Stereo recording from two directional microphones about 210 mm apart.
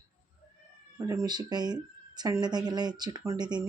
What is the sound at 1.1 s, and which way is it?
Speech, 15° right (ahead or behind).